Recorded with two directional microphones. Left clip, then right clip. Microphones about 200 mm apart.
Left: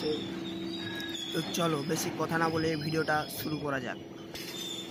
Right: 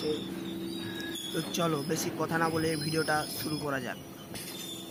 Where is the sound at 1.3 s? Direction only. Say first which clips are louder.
Even; centre (ahead or behind).